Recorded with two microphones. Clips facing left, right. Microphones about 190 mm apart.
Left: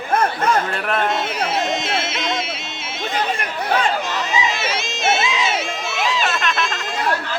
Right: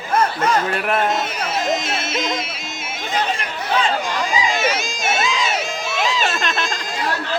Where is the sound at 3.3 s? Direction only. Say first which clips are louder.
Left 1 dB; 55° left (ahead or behind).